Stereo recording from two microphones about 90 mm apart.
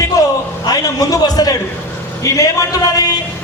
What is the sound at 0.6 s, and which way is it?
A man's voice, 45° left (ahead or behind).